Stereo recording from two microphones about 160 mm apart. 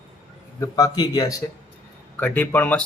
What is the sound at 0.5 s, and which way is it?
Speech, 20° left (ahead or behind).